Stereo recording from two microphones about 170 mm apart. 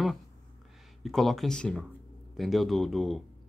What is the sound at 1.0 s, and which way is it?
Speech, centre (ahead or behind).